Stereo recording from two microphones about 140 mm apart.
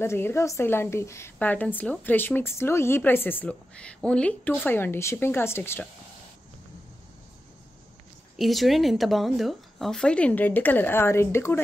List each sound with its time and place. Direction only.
0.0 s a woman's voice: 20° left (ahead or behind)
8.4 s a woman's voice: centre (ahead or behind); by 11.6 s 15° left (ahead or behind)